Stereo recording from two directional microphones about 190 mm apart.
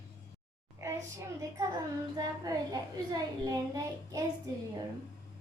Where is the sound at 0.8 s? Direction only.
15° right (ahead or behind).